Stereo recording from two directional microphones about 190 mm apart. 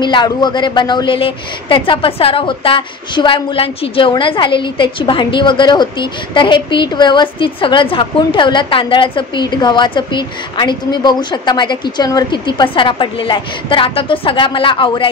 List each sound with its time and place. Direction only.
0.0 s a woman's voice: 25° left (ahead or behind)